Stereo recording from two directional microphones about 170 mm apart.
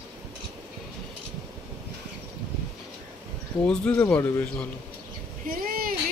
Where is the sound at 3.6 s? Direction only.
5° left (ahead or behind).